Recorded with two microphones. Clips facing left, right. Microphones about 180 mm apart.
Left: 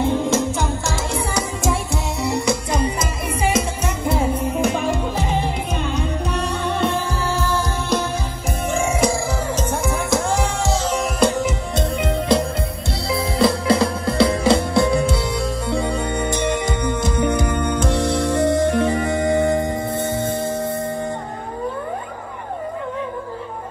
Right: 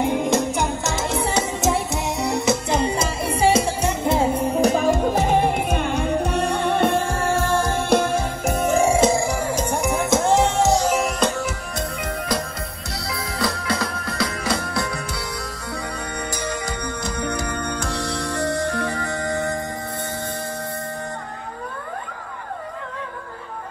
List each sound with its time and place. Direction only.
0.0 s music: 15° right (ahead or behind); by 8.6 s 55° right (ahead or behind)
8.6 s music: 35° right (ahead or behind)
9.1 s music: 15° right (ahead or behind)
11.1 s music: 15° left (ahead or behind)